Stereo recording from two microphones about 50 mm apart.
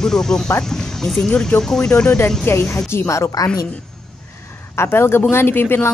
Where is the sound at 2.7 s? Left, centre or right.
Left.